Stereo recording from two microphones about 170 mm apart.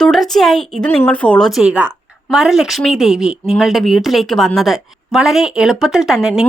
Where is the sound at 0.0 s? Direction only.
Centre (ahead or behind).